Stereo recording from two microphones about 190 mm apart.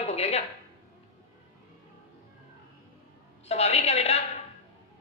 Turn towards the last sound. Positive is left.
turn(degrees=35)  # may be behind; listen again after turning